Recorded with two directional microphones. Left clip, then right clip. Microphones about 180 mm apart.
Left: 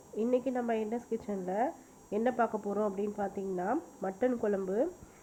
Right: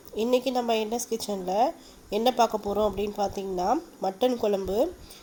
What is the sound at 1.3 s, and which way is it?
Speech, 25° right (ahead or behind).